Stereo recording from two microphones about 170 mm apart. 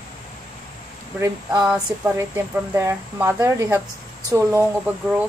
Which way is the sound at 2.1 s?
15° right (ahead or behind).